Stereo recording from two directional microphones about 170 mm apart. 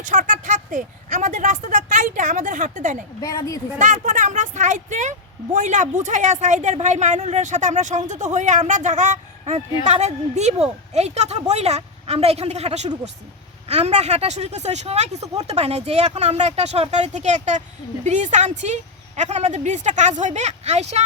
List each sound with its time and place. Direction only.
0.0 s speech: 50° right (ahead or behind)
3.2 s a woman's voice: 20° left (ahead or behind)
3.8 s speech: 45° right (ahead or behind)